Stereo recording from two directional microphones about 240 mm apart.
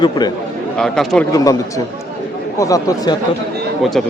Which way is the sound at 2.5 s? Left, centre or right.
Centre.